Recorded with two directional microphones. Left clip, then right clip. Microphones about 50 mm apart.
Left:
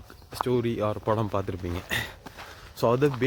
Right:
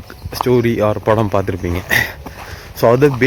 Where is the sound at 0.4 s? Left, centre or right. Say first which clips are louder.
Right 12 dB; left.